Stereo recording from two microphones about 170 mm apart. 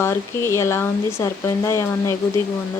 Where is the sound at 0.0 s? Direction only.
15° left (ahead or behind).